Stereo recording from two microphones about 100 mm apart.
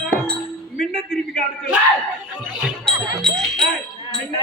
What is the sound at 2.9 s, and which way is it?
Music, 5° left (ahead or behind).